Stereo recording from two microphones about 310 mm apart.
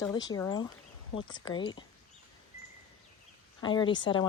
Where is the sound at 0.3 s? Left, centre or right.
Centre.